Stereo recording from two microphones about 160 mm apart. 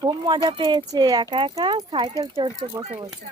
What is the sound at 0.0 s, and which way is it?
Speech, 25° right (ahead or behind).